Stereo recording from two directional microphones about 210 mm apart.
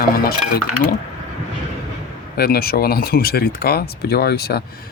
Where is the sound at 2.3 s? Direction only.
45° left (ahead or behind).